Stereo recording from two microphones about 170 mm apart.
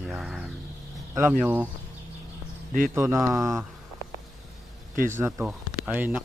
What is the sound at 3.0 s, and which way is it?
Speech, 15° right (ahead or behind).